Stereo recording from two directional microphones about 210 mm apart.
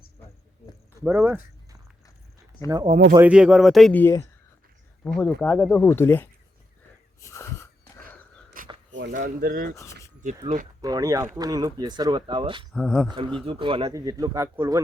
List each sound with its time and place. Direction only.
1.0 s speech: 10° right (ahead or behind)
2.6 s speech: 20° right (ahead or behind)
3.2 s speech: 5° right (ahead or behind); by 6.2 s 10° left (ahead or behind)
7.2 s wheeze: 15° left (ahead or behind)
8.6 s a sound: 40° right (ahead or behind)
9.0 s speech: 40° right (ahead or behind)
10.8 s speech: 15° right (ahead or behind)
12.7 s speech: centre (ahead or behind)
13.4 s speech: 25° right (ahead or behind)